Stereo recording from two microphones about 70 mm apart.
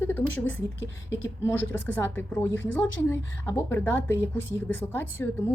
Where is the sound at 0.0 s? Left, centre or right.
Left.